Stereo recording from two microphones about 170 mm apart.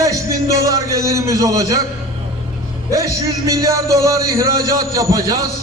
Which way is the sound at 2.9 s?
20° right (ahead or behind).